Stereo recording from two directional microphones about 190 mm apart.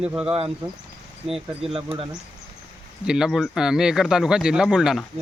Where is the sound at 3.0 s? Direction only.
5° right (ahead or behind).